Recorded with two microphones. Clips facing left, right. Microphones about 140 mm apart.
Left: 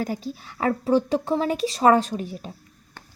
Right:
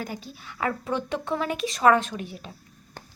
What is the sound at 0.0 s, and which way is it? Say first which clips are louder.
A child's voice: left 7 dB; 35° left (ahead or behind).